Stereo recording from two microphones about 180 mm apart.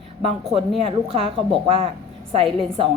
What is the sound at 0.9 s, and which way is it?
A woman's voice, 30° right (ahead or behind).